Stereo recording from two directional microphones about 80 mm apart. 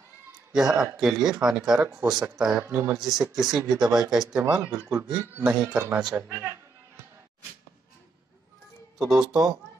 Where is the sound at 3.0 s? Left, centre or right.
Centre.